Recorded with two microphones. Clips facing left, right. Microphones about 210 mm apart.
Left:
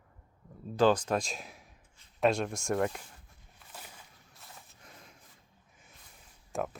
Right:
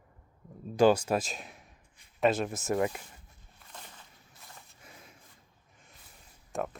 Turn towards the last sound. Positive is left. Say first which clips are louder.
# even
turn(degrees=0)  # may be behind; listen again after turning